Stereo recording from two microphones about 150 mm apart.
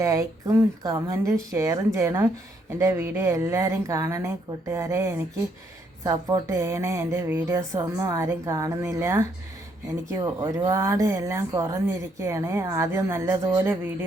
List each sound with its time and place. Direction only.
0.0 s speech: 20° right (ahead or behind)